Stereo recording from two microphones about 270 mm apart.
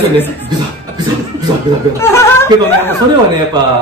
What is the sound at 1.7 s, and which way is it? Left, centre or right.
Speech, centre.